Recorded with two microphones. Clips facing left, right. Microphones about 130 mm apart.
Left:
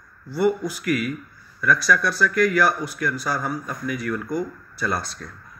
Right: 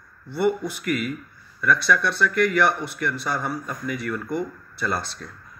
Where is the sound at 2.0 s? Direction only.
30° right (ahead or behind).